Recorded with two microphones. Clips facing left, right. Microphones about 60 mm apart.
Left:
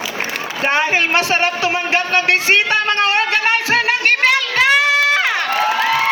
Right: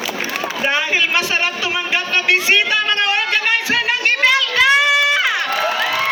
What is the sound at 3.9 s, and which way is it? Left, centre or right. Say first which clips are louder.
Crowd: right 1 dB; left.